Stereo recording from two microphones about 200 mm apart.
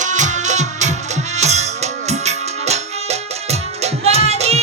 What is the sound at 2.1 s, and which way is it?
Music, 35° right (ahead or behind).